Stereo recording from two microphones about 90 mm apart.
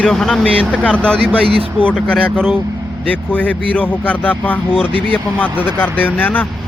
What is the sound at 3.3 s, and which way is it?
Speech, 15° left (ahead or behind).